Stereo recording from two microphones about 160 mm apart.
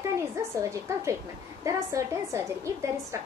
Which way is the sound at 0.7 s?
20° right (ahead or behind).